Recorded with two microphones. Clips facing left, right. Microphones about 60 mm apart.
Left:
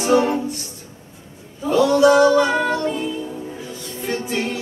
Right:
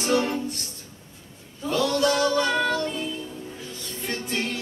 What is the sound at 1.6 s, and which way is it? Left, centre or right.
Female singing, centre.